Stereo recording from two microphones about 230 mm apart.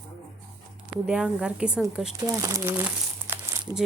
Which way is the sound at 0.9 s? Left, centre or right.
Centre.